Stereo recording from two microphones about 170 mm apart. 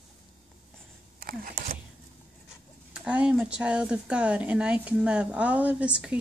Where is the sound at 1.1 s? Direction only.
60° right (ahead or behind).